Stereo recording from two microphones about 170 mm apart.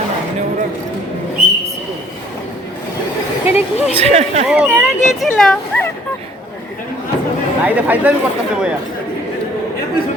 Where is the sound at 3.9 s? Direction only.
40° right (ahead or behind).